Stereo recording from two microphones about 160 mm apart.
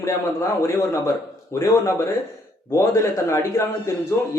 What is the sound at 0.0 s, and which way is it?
Speech, 15° left (ahead or behind).